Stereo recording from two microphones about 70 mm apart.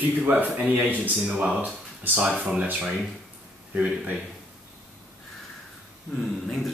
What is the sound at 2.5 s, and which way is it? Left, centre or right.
Speech, centre.